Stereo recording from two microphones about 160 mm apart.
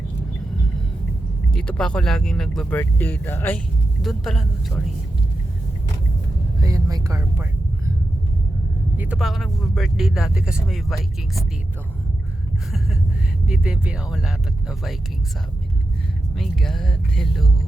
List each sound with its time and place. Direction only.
1.5 s speech: 5° left (ahead or behind)
4.0 s speech: centre (ahead or behind)
6.6 s speech: 20° right (ahead or behind)
9.0 s speech: 5° right (ahead or behind)
13.5 s speech: 5° right (ahead or behind)
16.3 s speech: centre (ahead or behind)